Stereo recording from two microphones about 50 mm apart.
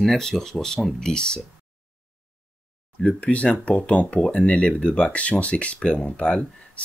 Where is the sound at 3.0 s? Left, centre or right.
Left.